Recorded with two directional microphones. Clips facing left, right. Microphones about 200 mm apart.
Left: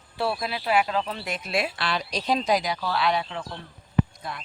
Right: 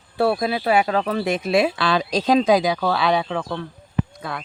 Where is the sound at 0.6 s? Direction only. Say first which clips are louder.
Right 5 dB; 85° right.